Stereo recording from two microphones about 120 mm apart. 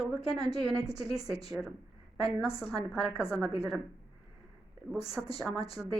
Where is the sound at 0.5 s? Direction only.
30° right (ahead or behind).